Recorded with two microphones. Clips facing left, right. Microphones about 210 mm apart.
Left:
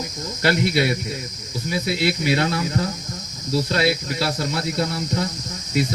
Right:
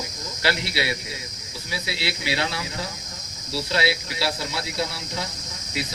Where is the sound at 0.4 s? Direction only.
50° left (ahead or behind).